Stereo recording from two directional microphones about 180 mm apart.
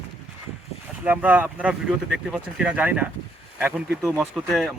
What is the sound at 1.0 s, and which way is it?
Speech, 10° right (ahead or behind).